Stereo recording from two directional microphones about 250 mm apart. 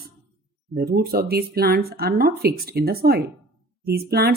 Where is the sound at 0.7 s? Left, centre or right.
Right.